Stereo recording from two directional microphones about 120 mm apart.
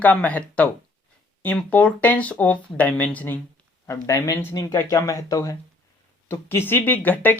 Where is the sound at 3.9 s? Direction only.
25° left (ahead or behind).